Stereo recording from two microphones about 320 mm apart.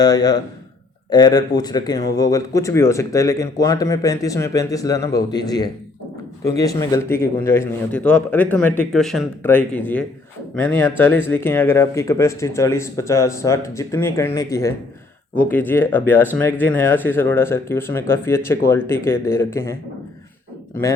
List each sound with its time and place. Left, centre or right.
0.0 s speech: centre